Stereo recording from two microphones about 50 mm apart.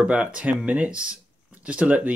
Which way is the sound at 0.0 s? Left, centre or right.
Right.